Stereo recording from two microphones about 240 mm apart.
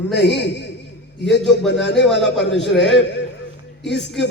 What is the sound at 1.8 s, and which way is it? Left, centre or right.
A woman's voice, left.